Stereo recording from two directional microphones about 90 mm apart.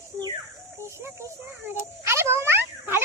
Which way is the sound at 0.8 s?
30° right (ahead or behind).